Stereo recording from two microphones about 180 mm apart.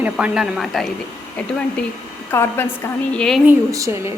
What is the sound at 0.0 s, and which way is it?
Speech, 5° right (ahead or behind).